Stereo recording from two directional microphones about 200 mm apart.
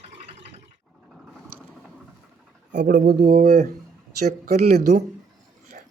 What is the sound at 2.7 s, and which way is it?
Speech, 45° right (ahead or behind).